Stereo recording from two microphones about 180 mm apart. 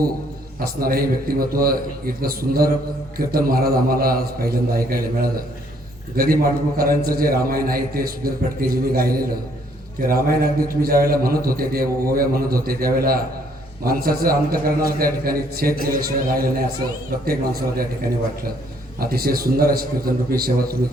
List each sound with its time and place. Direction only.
0.6 s a man's voice: 55° right (ahead or behind)
18.9 s a man's voice: 55° right (ahead or behind)